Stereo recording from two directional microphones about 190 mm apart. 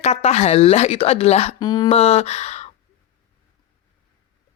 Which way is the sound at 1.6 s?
20° left (ahead or behind).